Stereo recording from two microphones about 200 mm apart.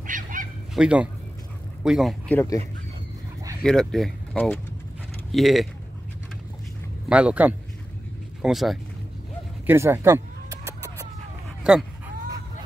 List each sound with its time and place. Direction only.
0.0 s goose: 40° right (ahead or behind)
0.7 s speech: 5° right (ahead or behind)
3.6 s speech: 5° left (ahead or behind)
7.1 s speech: 5° right (ahead or behind)
9.7 s chicken: 10° right (ahead or behind)